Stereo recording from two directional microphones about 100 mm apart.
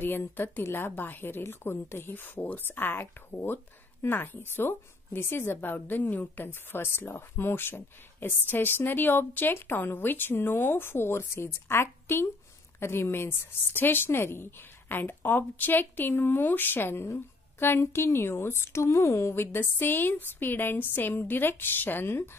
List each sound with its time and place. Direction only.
0.0 s a woman's voice: 20° left (ahead or behind)